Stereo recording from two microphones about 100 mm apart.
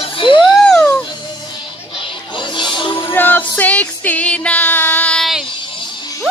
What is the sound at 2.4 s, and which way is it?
Music, 50° left (ahead or behind).